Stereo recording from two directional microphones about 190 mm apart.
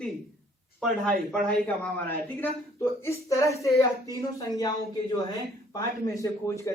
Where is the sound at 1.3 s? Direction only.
5° left (ahead or behind).